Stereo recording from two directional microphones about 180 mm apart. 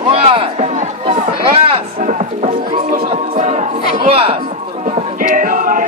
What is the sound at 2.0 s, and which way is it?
Music, 45° right (ahead or behind).